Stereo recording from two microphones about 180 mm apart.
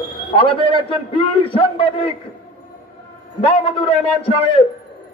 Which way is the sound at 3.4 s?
30° left (ahead or behind).